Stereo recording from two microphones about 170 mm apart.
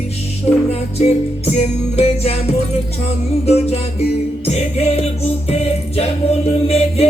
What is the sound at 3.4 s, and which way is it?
Music, 35° left (ahead or behind).